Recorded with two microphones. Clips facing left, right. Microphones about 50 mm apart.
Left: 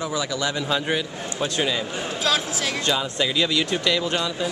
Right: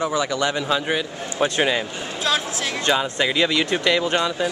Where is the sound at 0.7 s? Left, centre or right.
Centre.